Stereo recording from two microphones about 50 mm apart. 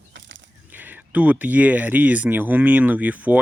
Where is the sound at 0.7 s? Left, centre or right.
Right.